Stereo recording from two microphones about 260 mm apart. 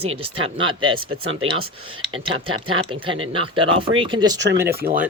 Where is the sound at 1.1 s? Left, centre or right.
Right.